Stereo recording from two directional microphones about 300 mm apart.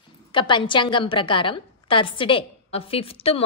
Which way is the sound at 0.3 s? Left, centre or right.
Centre.